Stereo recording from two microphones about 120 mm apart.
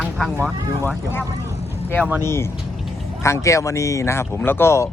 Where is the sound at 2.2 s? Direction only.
20° left (ahead or behind).